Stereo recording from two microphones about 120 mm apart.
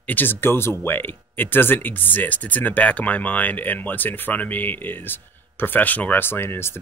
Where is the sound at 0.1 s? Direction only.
15° left (ahead or behind).